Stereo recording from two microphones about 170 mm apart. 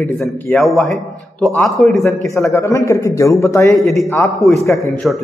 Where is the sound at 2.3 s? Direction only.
20° left (ahead or behind).